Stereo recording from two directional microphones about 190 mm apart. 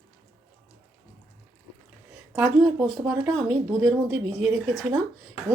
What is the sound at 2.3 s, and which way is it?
Speech, 5° right (ahead or behind).